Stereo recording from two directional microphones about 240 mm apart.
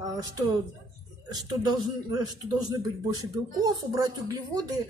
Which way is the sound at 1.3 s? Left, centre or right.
Centre.